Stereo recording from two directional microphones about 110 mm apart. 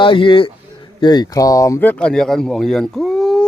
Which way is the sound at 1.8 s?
10° left (ahead or behind).